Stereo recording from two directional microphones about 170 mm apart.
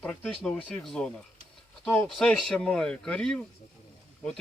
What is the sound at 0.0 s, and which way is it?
Speech, 10° left (ahead or behind).